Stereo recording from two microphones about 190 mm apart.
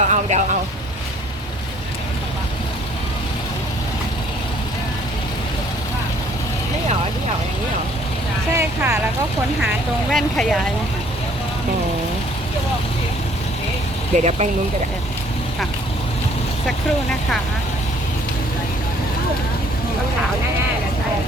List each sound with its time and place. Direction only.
0.0 s vehicle: 40° right (ahead or behind)
8.5 s speech: 15° right (ahead or behind)
10.1 s speech: centre (ahead or behind)
14.1 s speech: 40° right (ahead or behind)